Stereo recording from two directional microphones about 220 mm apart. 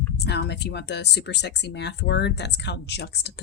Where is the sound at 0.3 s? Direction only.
50° left (ahead or behind).